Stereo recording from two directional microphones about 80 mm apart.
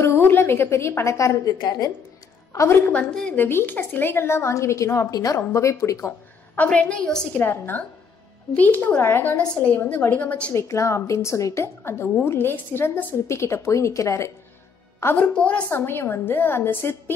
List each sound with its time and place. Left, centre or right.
0.0 s a woman's voice: left
1.6 s a woman's voice: left
2.5 s a woman's voice: left
2.8 s a woman's voice: centre
3.3 s a woman's voice: left
6.5 s a woman's voice: centre
10.5 s a woman's voice: left
15.1 s a woman's voice: centre
15.7 s a woman's voice: left